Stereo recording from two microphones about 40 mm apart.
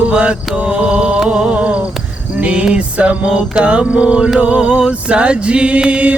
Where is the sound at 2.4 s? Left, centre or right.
Right.